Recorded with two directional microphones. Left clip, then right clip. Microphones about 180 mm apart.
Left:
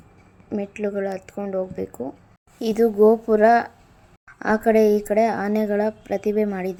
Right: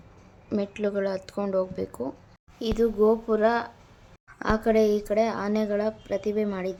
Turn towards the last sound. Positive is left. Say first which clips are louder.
# left 5 dB
turn(degrees=20)  # may be behind; listen again after turning